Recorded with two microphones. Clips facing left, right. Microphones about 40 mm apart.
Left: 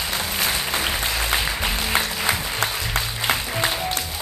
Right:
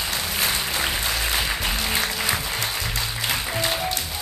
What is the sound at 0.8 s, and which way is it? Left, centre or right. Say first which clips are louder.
Music: left 1 dB; centre.